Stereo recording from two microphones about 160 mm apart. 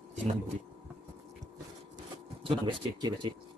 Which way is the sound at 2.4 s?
30° right (ahead or behind).